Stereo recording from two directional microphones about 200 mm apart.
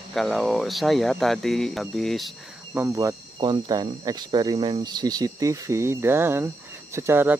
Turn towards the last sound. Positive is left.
turn(degrees=-10)  # may be behind; listen again after turning